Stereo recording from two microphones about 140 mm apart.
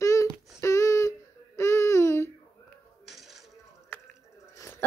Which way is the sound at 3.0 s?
Centre (ahead or behind).